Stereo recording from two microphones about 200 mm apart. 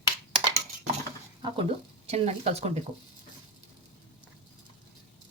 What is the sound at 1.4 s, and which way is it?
Speech, 30° right (ahead or behind).